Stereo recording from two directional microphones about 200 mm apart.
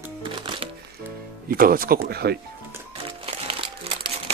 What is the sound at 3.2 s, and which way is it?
Crumpling, 30° right (ahead or behind).